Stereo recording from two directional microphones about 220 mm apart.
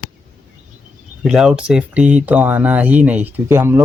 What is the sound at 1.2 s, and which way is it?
Speech, centre (ahead or behind).